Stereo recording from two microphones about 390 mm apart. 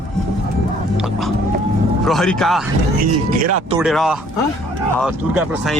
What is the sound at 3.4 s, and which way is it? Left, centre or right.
Speech, right.